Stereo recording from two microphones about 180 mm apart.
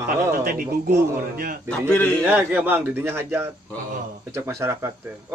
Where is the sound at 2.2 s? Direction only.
10° right (ahead or behind).